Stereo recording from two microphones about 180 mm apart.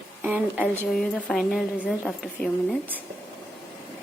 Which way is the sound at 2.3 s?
5° left (ahead or behind).